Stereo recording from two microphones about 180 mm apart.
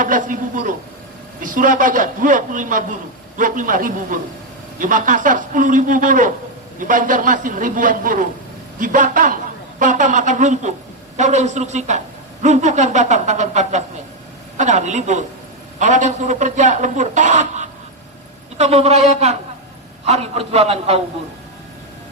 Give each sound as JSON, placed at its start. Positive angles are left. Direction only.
{"t": 0.0, "sound": "a man's voice", "side_deg": -50}